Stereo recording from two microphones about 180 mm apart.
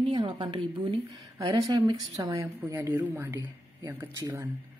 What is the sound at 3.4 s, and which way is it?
A woman's voice, 25° right (ahead or behind).